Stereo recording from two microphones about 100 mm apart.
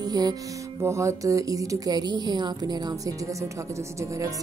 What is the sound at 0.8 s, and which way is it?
Speech, 30° right (ahead or behind).